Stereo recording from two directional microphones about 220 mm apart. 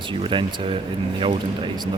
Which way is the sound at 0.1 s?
20° right (ahead or behind).